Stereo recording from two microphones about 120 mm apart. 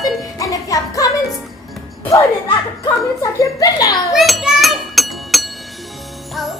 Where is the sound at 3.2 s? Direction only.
30° left (ahead or behind).